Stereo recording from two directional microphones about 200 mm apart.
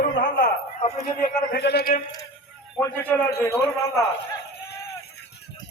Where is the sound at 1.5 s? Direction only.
55° left (ahead or behind).